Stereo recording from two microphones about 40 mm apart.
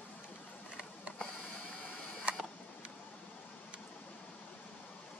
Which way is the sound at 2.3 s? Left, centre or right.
Right.